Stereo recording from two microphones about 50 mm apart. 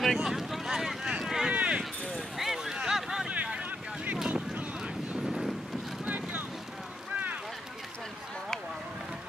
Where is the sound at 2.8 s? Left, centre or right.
Centre.